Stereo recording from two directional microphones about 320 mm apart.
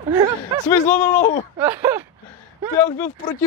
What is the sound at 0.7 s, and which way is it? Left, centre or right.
Groan, centre.